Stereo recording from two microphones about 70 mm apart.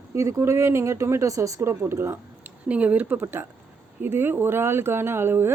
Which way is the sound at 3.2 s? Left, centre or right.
Right.